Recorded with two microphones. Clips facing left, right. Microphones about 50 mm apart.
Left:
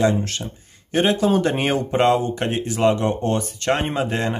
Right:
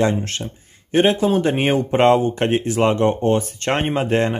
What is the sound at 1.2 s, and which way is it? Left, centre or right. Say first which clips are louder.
Speech: right 1 dB; right.